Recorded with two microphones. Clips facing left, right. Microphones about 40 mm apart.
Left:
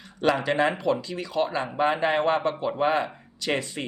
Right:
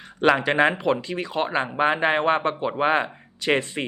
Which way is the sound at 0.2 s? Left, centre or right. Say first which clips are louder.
Right 4 dB; right.